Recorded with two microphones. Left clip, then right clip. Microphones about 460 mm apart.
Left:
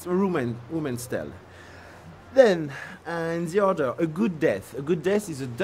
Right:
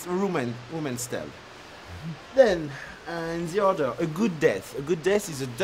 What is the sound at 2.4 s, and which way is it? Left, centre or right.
Speech, left.